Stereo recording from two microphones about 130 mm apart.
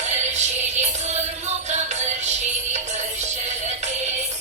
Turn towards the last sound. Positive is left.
turn(degrees=-60)  # may be behind; listen again after turning